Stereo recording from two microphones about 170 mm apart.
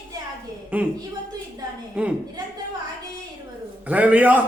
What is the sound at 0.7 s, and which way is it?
Speech, 10° right (ahead or behind).